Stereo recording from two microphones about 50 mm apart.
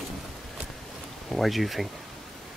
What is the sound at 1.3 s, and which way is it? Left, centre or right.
Speech, centre.